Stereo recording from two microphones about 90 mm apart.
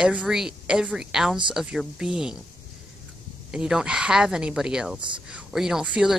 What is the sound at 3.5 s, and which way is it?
Speech, 5° right (ahead or behind).